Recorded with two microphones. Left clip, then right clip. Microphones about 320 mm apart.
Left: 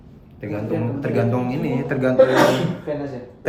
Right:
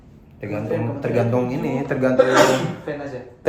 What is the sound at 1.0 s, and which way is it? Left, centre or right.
Speech, centre.